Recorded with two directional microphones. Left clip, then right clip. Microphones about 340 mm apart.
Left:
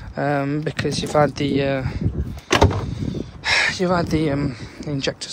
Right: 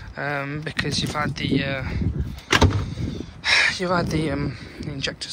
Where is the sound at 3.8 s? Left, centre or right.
Centre.